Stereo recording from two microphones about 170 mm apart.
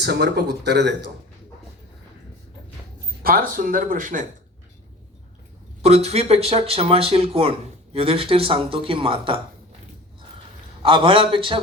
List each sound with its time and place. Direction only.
0.0 s speech: 80° right
3.2 s speech: 55° right (ahead or behind)
5.8 s speech: 40° right (ahead or behind)
10.8 s speech: 30° right (ahead or behind)